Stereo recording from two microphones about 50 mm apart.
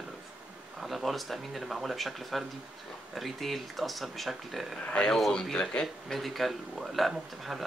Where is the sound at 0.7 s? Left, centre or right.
Centre.